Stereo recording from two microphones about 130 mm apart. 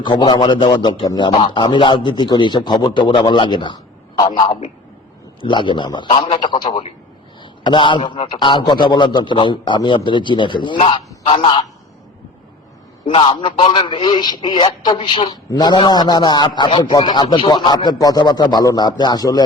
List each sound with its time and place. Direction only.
0.0 s a man's voice: 35° left (ahead or behind)
13.1 s a man's voice: 45° left (ahead or behind)